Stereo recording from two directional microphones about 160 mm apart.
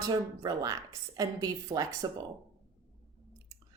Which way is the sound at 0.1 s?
25° right (ahead or behind).